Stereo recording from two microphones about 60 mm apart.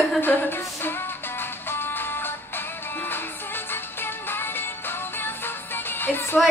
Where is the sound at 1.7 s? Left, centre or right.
Left.